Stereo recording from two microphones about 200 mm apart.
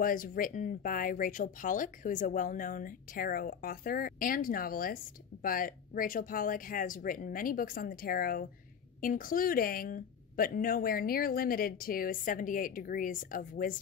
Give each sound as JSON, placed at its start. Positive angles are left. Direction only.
{"t": 0.0, "sound": "speech", "side_deg": 45}